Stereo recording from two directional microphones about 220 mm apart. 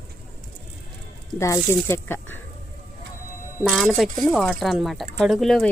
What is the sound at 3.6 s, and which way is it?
Speech, centre (ahead or behind).